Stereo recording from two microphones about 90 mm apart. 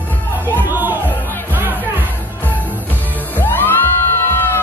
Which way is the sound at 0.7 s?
20° right (ahead or behind).